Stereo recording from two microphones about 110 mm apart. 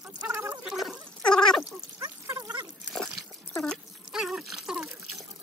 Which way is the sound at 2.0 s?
35° right (ahead or behind).